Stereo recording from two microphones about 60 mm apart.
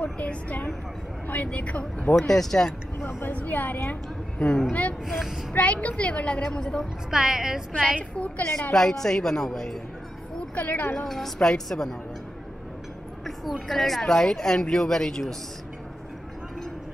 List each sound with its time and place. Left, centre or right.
0.0 s a woman's voice: left
2.2 s speech: centre
3.3 s a woman's voice: left
4.5 s speech: centre
5.0 s speech: centre
5.5 s a woman's voice: left
6.8 s a woman's voice: centre
8.2 s a woman's voice: left
8.7 s speech: centre
10.5 s a woman's voice: left
11.1 s speech: centre
13.2 s speech: centre